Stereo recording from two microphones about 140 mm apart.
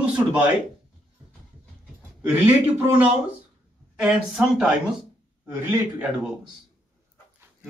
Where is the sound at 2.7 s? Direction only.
15° right (ahead or behind).